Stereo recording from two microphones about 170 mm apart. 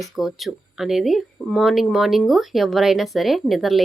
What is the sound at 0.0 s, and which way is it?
Speech, centre (ahead or behind).